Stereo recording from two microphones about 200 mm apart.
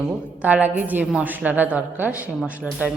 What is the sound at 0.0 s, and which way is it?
A woman's voice, 5° right (ahead or behind).